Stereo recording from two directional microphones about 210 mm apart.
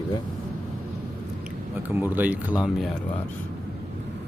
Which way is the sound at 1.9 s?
10° right (ahead or behind).